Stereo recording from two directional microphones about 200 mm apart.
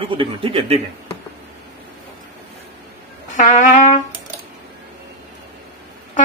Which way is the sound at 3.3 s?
40° left (ahead or behind).